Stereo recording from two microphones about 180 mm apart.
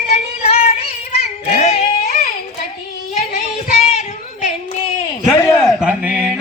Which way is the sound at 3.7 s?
40° left (ahead or behind).